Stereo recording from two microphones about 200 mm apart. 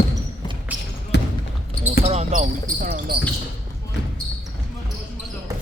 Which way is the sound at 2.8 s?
45° right (ahead or behind).